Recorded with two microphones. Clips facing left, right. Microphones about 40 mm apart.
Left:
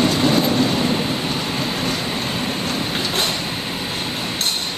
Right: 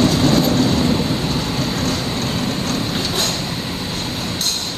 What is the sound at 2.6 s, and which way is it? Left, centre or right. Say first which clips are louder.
Train: right 1 dB; centre.